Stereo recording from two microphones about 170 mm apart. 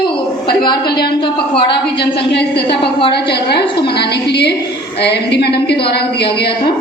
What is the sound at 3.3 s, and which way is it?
A woman's voice, 75° left (ahead or behind).